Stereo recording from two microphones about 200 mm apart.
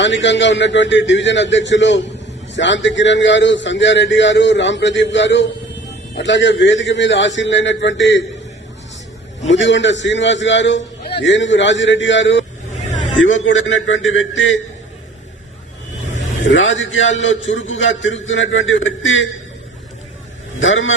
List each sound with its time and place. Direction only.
0.0 s a man's voice: 65° left (ahead or behind)
9.5 s a man's voice: 65° left (ahead or behind)
16.4 s a man's voice: 70° left (ahead or behind)
20.6 s a man's voice: 75° left (ahead or behind)